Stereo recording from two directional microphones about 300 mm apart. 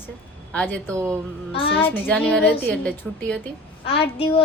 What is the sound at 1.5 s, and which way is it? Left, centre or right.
Speech, centre.